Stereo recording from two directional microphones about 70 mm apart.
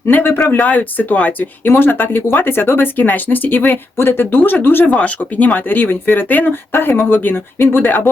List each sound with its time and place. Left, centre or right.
0.1 s speech: left
0.6 s speech: left
4.9 s speech: centre